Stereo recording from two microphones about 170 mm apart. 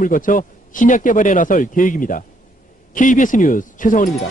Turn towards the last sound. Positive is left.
turn(degrees=50)  # may be behind; listen again after turning